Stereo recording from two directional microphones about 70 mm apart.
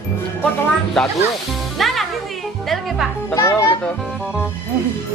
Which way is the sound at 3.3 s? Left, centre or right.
Left.